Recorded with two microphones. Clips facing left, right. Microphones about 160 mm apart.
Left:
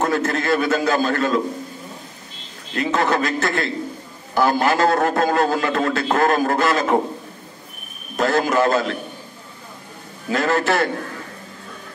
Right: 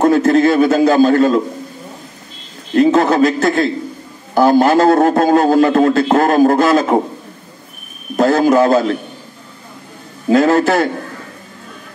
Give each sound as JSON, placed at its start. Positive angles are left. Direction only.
{"t": 0.0, "sound": "a man's voice", "side_deg": -35}
{"t": 2.8, "sound": "a man's voice", "side_deg": -35}
{"t": 8.2, "sound": "a man's voice", "side_deg": -40}
{"t": 10.3, "sound": "a man's voice", "side_deg": -35}